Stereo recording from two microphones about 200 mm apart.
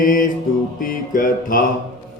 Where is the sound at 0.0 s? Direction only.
45° left (ahead or behind).